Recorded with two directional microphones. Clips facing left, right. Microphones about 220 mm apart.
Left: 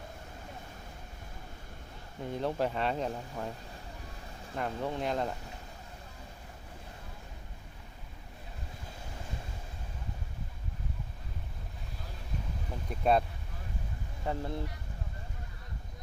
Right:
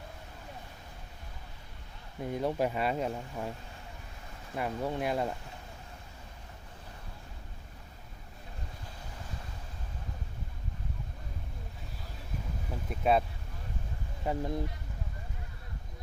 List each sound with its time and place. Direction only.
2.3 s speech: 10° right (ahead or behind)
4.5 s speech: 10° right (ahead or behind)
12.7 s vehicle: 5° right (ahead or behind)
14.3 s speech: 15° right (ahead or behind)